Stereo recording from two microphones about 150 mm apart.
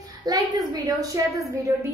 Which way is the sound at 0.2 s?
25° right (ahead or behind).